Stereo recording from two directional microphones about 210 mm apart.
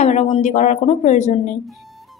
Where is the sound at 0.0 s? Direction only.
30° left (ahead or behind).